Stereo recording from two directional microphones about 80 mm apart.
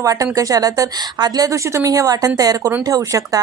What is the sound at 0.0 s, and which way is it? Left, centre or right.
A woman's voice, right.